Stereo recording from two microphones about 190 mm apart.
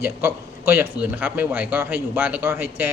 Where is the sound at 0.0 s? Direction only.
10° right (ahead or behind).